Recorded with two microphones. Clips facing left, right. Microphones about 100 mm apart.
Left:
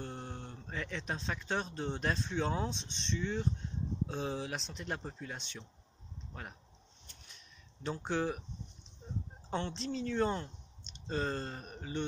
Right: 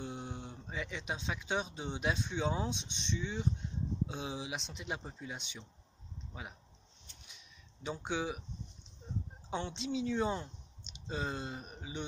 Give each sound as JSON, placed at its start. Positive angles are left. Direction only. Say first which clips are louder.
{"t": 0.0, "sound": "speech", "louder": "right 1 dB", "side_deg": -5}
{"t": 7.2, "sound": "a sound", "louder": "even", "side_deg": -5}
{"t": 9.5, "sound": "a woman's voice", "louder": "even", "side_deg": -5}